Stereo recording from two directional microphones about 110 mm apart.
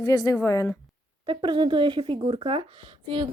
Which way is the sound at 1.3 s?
45° right (ahead or behind).